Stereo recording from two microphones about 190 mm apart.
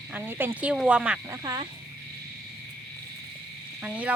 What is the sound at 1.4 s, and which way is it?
Speech, 20° right (ahead or behind).